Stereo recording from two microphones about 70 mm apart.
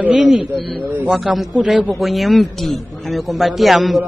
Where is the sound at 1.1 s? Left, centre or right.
Centre.